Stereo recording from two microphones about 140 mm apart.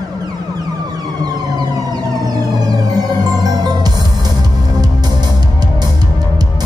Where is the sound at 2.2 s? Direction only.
30° right (ahead or behind).